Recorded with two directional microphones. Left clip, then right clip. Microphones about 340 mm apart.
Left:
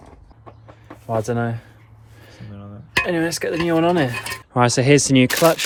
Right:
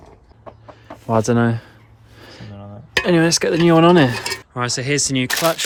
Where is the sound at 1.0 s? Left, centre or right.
Right.